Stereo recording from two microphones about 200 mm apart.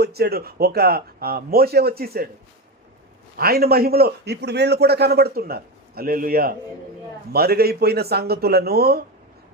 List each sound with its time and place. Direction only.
0.0 s a man's voice: 50° right (ahead or behind)
3.3 s a man's voice: 50° right (ahead or behind)